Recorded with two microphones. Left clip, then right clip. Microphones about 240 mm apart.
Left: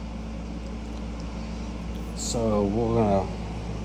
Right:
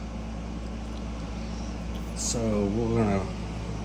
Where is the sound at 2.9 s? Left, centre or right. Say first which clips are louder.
Left 5 dB; centre.